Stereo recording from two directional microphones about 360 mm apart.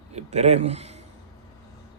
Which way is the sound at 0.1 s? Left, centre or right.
Centre.